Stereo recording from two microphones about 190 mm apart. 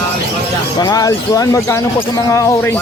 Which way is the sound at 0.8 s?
20° left (ahead or behind).